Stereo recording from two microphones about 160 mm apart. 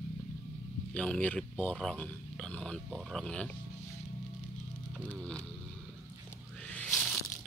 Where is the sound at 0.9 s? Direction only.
5° left (ahead or behind).